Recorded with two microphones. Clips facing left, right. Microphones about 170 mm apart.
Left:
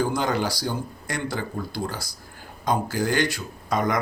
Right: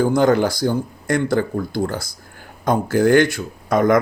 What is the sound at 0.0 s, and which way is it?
Speech, 50° right (ahead or behind).